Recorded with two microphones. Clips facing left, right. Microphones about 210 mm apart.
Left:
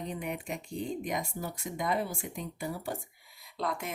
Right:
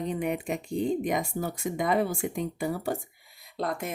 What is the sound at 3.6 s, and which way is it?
Speech, 50° right (ahead or behind).